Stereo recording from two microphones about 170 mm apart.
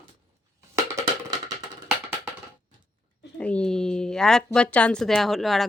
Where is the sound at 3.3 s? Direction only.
5° left (ahead or behind).